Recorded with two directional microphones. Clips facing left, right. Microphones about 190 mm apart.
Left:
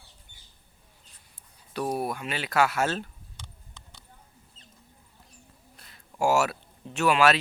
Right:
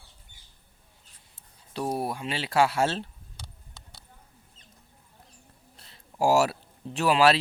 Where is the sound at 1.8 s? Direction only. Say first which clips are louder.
Even; 30° right (ahead or behind).